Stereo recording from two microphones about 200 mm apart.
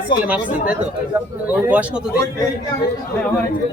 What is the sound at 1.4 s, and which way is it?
Speech, 10° right (ahead or behind).